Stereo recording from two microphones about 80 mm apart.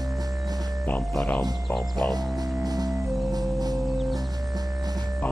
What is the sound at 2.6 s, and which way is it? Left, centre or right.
Music, right.